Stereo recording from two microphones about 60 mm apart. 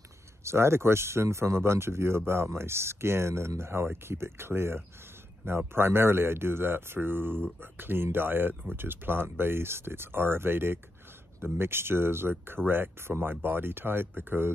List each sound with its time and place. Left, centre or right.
0.4 s speech: right